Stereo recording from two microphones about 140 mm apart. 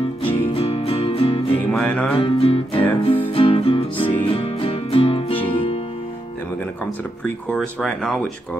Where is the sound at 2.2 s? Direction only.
40° left (ahead or behind).